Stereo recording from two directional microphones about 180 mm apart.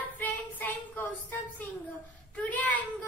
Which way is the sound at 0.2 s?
10° left (ahead or behind).